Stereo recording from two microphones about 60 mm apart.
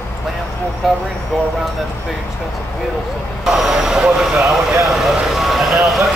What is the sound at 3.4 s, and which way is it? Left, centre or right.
Speech, centre.